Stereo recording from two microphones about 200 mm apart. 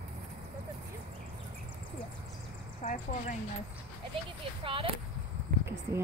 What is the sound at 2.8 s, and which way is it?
Speech, 35° left (ahead or behind).